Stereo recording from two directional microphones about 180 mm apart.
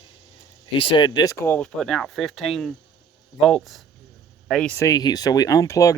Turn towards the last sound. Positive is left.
turn(degrees=20)  # may be behind; listen again after turning